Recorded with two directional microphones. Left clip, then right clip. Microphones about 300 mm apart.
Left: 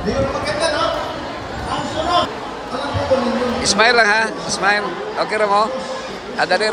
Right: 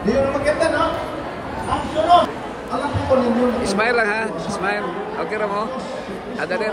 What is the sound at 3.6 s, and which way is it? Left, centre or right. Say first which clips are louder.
A man's voice: left 5 dB; centre.